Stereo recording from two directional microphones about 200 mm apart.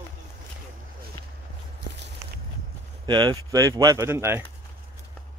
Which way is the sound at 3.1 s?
20° right (ahead or behind).